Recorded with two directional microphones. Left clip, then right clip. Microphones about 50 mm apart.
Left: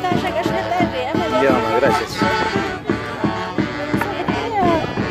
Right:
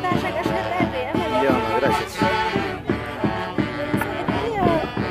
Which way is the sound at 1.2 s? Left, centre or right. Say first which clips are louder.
Left 4 dB; left.